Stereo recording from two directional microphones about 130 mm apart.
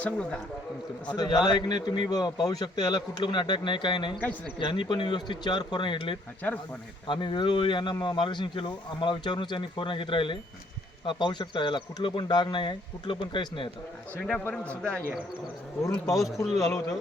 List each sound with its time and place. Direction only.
0.0 s a man's voice: 10° left (ahead or behind)
1.0 s speech: 30° left (ahead or behind)
6.4 s a man's voice: 15° left (ahead or behind)
7.1 s speech: 40° left (ahead or behind)
14.2 s a man's voice: 5° left (ahead or behind)
16.2 s a man's voice: centre (ahead or behind)
16.6 s speech: 25° left (ahead or behind)